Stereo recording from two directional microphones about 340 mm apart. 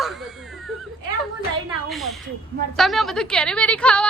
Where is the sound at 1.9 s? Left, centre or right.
Centre.